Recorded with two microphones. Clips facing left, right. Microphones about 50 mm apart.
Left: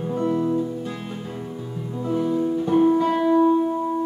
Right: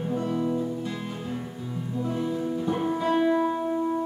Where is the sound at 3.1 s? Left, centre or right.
Centre.